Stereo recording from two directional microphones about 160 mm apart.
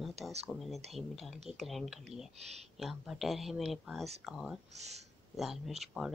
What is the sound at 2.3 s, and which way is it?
Speech, 40° right (ahead or behind).